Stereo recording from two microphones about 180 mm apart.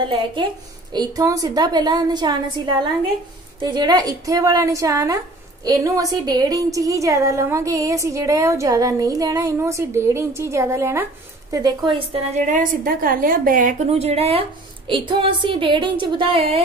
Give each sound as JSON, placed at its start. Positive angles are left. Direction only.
{"t": 0.9, "sound": "a woman's voice", "side_deg": -20}
{"t": 12.4, "sound": "a woman's voice", "side_deg": -45}
{"t": 13.8, "sound": "a woman's voice", "side_deg": -35}